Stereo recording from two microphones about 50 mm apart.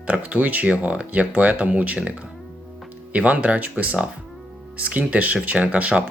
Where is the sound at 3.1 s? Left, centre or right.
Right.